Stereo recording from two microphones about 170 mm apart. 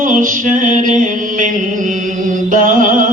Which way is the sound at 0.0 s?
55° right (ahead or behind).